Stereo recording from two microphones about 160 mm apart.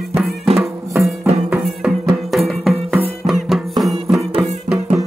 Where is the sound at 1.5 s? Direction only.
Centre (ahead or behind).